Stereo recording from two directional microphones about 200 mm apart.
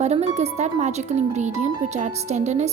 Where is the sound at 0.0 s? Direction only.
35° right (ahead or behind).